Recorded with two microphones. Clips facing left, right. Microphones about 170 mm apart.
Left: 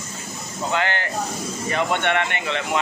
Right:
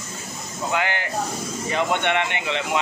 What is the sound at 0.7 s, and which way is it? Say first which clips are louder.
Speech: left 1 dB; 10° right (ahead or behind).